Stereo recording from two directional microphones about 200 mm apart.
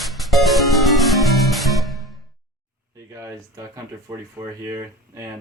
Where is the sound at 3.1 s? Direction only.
15° right (ahead or behind).